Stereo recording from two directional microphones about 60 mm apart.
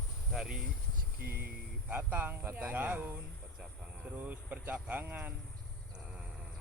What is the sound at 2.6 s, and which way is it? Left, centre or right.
Speech, right.